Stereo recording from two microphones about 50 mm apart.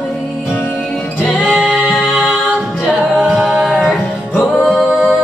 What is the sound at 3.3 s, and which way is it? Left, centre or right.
Music, centre.